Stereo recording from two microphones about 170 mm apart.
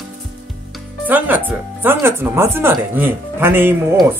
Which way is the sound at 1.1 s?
10° right (ahead or behind).